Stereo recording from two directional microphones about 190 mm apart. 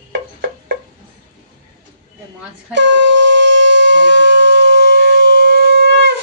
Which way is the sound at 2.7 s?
70° right (ahead or behind).